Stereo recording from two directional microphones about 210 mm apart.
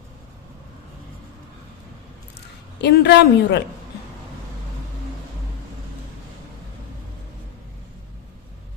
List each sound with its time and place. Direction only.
2.8 s speech: 50° left (ahead or behind)